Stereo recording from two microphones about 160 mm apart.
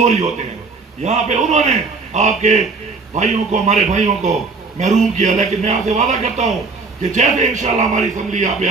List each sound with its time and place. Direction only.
0.0 s a man's voice: 45° right (ahead or behind)